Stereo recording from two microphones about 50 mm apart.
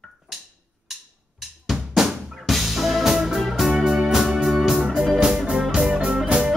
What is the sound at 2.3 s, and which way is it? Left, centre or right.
Music, centre.